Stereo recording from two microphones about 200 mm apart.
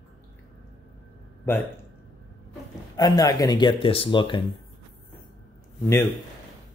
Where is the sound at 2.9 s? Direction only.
20° left (ahead or behind).